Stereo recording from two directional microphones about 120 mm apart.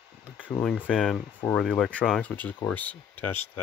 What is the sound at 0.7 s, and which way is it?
Speech, 10° left (ahead or behind).